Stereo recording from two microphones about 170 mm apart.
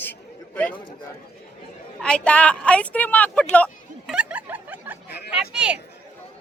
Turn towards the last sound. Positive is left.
turn(degrees=-5)  # may be behind; listen again after turning